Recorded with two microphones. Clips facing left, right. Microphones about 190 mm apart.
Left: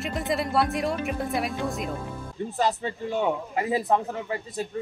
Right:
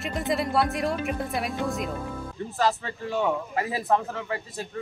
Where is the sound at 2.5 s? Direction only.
20° left (ahead or behind).